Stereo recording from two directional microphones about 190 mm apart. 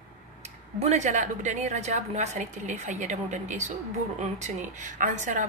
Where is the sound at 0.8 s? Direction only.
35° right (ahead or behind).